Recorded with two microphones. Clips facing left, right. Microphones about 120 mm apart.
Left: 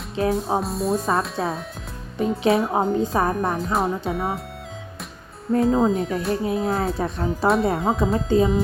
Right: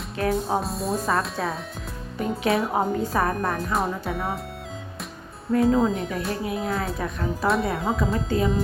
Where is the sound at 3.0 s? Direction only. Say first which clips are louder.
Left 2 dB; 25° left (ahead or behind).